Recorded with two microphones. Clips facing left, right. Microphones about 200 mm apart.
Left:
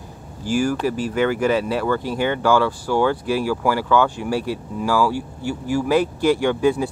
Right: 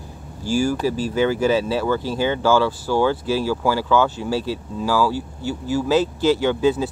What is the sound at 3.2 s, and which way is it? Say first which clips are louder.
Speech: even; 25° right (ahead or behind).